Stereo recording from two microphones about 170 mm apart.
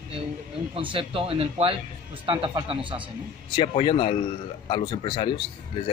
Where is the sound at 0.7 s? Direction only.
30° right (ahead or behind).